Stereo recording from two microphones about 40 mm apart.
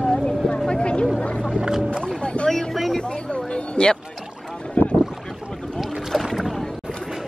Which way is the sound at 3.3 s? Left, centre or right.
Left.